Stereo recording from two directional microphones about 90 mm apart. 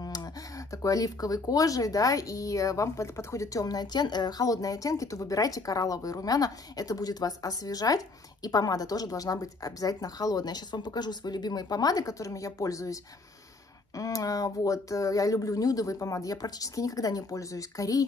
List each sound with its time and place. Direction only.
0.0 s speech: 45° left (ahead or behind)